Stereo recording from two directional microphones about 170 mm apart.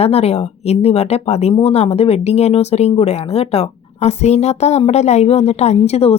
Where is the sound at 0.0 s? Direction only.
35° left (ahead or behind).